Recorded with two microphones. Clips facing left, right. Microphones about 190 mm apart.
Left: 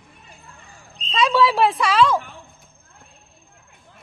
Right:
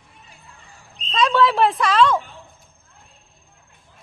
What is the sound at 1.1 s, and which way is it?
Speech, 5° left (ahead or behind).